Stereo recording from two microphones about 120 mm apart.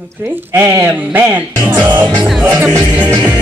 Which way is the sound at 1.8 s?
20° right (ahead or behind).